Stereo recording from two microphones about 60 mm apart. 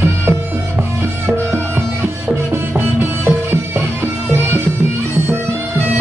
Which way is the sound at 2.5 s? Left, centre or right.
Right.